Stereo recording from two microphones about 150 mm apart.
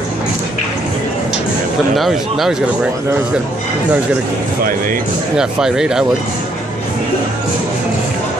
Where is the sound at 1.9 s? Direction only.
Centre (ahead or behind).